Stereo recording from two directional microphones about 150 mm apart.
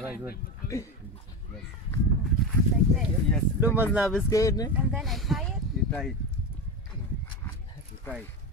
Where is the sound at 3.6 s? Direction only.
10° right (ahead or behind).